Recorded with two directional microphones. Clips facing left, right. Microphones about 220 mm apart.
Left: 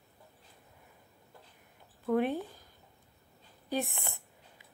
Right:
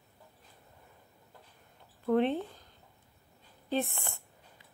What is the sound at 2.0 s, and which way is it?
Speech, 5° left (ahead or behind).